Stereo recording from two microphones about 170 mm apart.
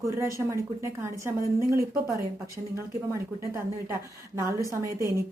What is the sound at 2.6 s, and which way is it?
Speech, 45° right (ahead or behind).